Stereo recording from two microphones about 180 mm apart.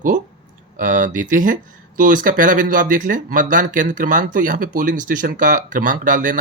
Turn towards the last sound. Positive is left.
turn(degrees=-45)  # may be behind; listen again after turning